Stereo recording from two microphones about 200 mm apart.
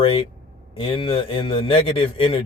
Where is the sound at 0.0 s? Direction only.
25° left (ahead or behind).